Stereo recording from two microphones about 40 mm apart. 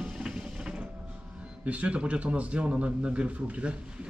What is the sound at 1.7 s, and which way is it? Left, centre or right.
Speech, right.